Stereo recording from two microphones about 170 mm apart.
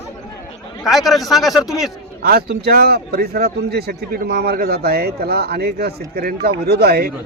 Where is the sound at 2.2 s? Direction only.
65° right (ahead or behind).